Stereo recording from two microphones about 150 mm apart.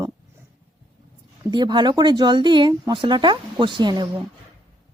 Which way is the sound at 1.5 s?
30° right (ahead or behind).